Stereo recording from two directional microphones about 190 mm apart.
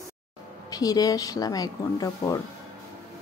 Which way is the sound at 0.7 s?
20° left (ahead or behind).